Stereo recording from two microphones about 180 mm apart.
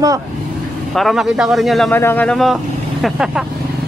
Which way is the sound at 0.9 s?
Centre (ahead or behind).